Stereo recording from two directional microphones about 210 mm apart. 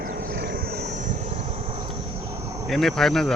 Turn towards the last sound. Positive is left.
turn(degrees=0)  # may be behind; listen again after turning